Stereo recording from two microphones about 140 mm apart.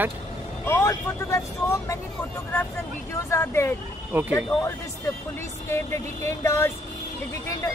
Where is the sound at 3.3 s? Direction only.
20° left (ahead or behind).